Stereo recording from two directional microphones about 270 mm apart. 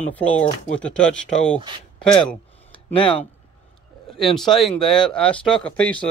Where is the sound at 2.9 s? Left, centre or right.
Centre.